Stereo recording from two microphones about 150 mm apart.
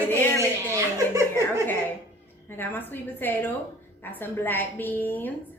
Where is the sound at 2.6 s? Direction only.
15° left (ahead or behind).